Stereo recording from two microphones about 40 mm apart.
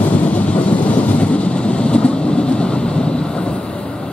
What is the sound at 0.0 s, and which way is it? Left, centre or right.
Train, left.